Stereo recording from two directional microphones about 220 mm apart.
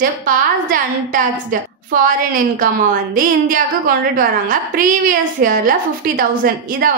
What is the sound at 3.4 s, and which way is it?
A woman's voice, 40° right (ahead or behind).